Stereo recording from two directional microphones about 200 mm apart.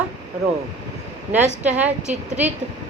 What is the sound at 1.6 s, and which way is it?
Speech, 10° right (ahead or behind).